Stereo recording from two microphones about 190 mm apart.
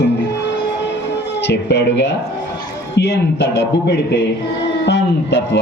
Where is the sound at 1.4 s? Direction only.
65° left (ahead or behind).